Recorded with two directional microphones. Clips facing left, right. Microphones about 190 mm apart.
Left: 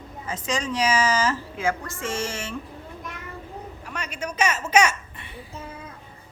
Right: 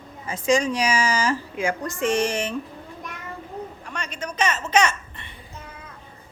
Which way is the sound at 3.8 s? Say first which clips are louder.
Even; 5° left (ahead or behind).